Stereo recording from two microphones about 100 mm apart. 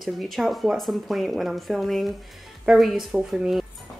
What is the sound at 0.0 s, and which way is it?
Speech, centre (ahead or behind).